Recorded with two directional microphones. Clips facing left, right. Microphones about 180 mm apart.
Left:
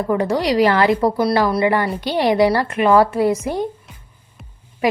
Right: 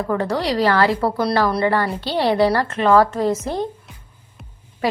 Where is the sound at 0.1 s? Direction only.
15° left (ahead or behind).